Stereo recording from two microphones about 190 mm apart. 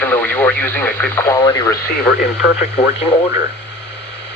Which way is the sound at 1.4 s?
20° left (ahead or behind).